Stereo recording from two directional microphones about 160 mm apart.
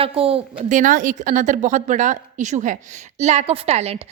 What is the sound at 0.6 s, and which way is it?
A woman's voice, 55° right (ahead or behind).